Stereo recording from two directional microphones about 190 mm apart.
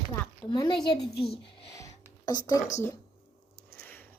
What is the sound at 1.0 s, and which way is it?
Speech, centre (ahead or behind).